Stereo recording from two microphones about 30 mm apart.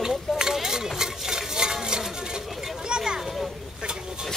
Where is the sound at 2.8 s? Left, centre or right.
Right.